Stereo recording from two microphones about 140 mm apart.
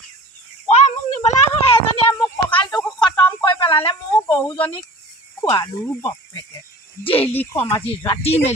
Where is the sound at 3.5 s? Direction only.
40° left (ahead or behind).